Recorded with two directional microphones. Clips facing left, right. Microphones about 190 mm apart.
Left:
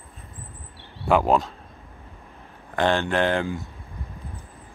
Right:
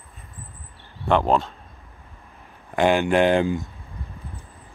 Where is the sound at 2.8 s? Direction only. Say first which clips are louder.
Right 4 dB; 10° right (ahead or behind).